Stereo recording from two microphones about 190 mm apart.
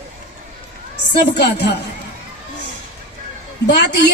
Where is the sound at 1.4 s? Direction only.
65° left (ahead or behind).